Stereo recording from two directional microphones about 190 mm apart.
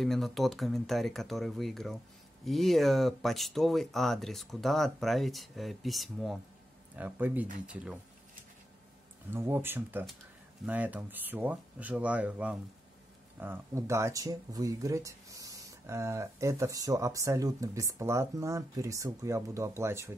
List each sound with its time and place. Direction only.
0.0 s speech: centre (ahead or behind)
9.3 s speech: 10° right (ahead or behind)